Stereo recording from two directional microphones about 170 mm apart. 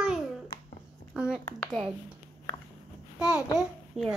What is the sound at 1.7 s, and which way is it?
Speech, centre (ahead or behind).